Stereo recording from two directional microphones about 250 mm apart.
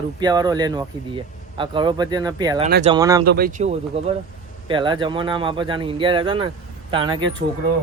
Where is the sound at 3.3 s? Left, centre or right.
Right; by 7.2 s centre.